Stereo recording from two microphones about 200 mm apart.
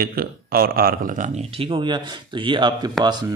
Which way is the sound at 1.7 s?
25° right (ahead or behind).